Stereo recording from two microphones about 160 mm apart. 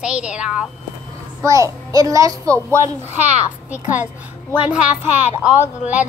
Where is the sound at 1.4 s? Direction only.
20° right (ahead or behind).